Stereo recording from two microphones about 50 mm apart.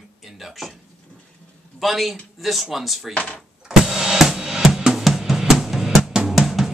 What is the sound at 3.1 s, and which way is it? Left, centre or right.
Speech, left.